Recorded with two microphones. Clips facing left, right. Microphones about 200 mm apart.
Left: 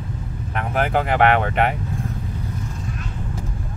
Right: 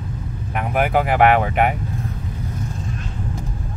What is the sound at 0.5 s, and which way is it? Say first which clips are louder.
Speech: right 2 dB; 10° right (ahead or behind).